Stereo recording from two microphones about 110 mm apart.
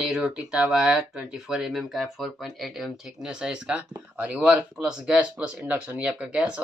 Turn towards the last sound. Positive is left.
turn(degrees=-10)  # may be behind; listen again after turning